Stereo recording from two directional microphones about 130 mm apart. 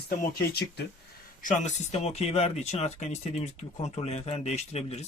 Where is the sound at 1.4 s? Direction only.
75° left (ahead or behind); by 5.0 s 55° left (ahead or behind).